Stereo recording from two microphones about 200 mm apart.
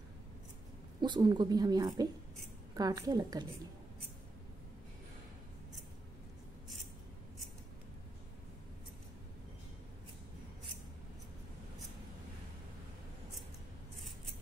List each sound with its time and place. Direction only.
1.0 s a woman's voice: 20° right (ahead or behind)